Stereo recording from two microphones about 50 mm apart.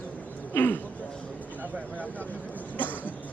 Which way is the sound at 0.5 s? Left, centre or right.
Left.